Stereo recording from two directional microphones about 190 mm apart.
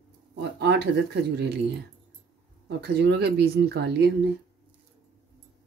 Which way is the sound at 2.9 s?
60° right (ahead or behind).